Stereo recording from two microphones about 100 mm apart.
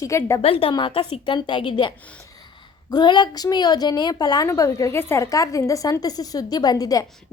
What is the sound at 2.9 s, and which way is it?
A woman's voice, 45° left (ahead or behind).